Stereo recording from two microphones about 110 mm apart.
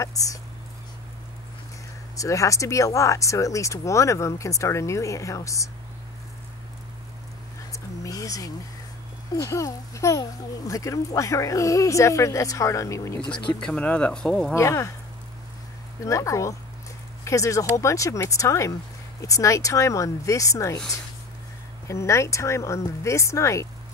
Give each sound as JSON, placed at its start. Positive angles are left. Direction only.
{"t": 0.0, "sound": "speech", "side_deg": 30}
{"t": 2.1, "sound": "speech", "side_deg": 30}
{"t": 7.7, "sound": "a sound", "side_deg": 30}
{"t": 9.3, "sound": "speech", "side_deg": 30}
{"t": 13.6, "sound": "speech", "side_deg": 10}
{"t": 14.5, "sound": "speech", "side_deg": 25}
{"t": 16.0, "sound": "speech", "side_deg": 30}
{"t": 21.8, "sound": "speech", "side_deg": 25}